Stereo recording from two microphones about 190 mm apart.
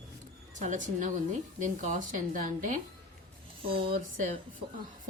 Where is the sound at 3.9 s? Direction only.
45° right (ahead or behind).